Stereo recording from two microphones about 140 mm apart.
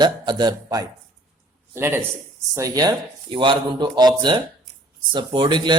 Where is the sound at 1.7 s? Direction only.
15° right (ahead or behind).